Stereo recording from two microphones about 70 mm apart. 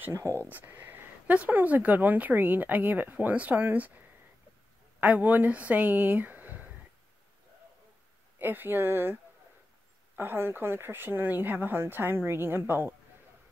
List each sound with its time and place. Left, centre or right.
0.0 s speech: right
0.5 s speech: right
5.0 s speech: right
8.4 s speech: right